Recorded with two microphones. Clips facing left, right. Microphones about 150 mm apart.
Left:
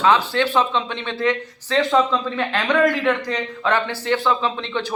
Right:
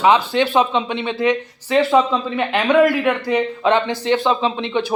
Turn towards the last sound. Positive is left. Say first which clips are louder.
# right 4 dB
turn(degrees=-15)  # may be behind; listen again after turning